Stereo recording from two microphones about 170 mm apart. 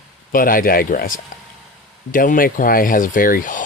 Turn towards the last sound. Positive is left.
turn(degrees=55)  # may be behind; listen again after turning